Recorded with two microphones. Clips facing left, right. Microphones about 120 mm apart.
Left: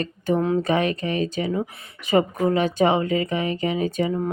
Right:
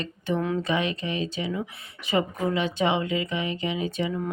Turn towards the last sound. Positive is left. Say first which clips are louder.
# left 5 dB
turn(degrees=40)  # may be behind; listen again after turning